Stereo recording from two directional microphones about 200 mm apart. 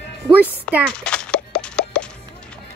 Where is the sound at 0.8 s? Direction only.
5° left (ahead or behind).